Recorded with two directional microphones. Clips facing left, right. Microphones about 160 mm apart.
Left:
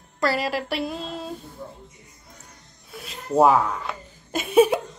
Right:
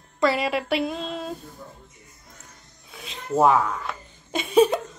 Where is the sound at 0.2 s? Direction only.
Centre (ahead or behind).